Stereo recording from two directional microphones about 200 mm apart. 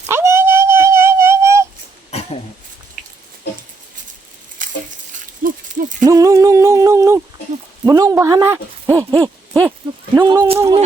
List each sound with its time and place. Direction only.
0.1 s dog: 15° right (ahead or behind)
2.0 s throat clearing: 30° left (ahead or behind)
4.6 s a sound: 40° right (ahead or behind)
6.1 s a capella: 15° right (ahead or behind)
7.9 s speech: 20° right (ahead or behind)
10.2 s speech: 25° right (ahead or behind)